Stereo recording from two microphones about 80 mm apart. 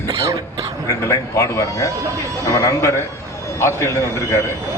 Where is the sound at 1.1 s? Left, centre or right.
Left.